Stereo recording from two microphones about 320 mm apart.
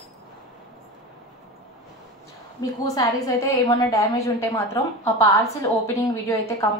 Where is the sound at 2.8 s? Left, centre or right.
Centre.